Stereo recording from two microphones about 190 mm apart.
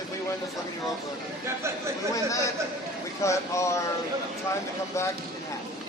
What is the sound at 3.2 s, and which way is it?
Speech, 15° left (ahead or behind).